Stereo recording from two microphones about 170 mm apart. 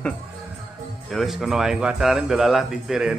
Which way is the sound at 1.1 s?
Centre (ahead or behind).